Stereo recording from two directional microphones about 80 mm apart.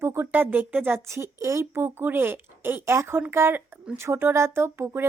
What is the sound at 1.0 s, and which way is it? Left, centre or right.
Speech, right.